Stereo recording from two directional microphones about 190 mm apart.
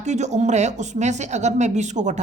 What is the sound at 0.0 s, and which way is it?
Speech, 35° right (ahead or behind).